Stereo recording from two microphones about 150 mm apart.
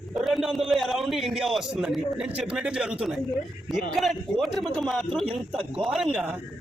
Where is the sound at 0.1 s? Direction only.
Centre (ahead or behind).